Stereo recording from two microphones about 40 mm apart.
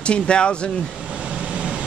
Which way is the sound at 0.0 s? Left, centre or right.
Left.